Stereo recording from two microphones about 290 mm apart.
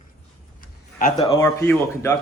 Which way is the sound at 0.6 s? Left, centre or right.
Left.